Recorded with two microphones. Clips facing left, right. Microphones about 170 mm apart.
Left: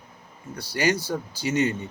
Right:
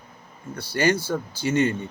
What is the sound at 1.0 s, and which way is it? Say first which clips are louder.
Speech: right 2 dB; 15° left (ahead or behind).